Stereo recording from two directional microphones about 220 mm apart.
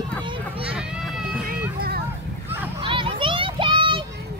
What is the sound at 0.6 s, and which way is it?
Run, 5° right (ahead or behind).